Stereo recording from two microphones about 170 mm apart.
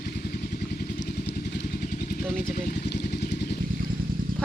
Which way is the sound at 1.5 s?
60° left (ahead or behind).